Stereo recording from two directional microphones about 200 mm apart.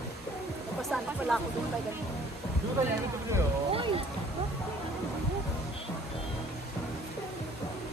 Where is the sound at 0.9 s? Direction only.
Centre (ahead or behind).